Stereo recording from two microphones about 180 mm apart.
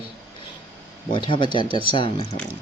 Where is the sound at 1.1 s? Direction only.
25° left (ahead or behind).